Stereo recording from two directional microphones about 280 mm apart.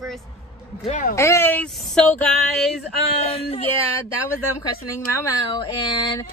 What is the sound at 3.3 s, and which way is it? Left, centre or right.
Speech, left.